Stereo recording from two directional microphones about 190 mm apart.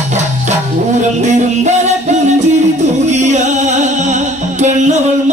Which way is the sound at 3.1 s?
40° right (ahead or behind).